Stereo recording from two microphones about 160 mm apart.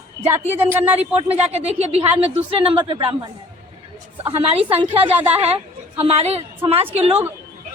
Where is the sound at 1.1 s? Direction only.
40° right (ahead or behind).